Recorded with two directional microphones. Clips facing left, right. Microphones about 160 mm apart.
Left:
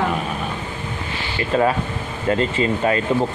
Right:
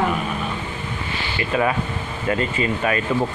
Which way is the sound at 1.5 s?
30° left (ahead or behind).